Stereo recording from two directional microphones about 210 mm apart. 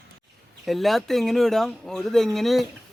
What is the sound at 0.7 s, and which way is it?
Speech, centre (ahead or behind).